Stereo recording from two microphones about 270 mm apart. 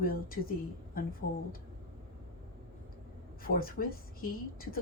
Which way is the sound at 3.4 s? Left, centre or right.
Left.